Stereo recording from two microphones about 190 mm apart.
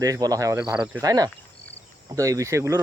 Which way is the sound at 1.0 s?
20° right (ahead or behind).